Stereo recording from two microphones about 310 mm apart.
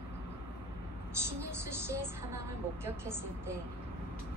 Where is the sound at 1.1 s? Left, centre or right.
Centre.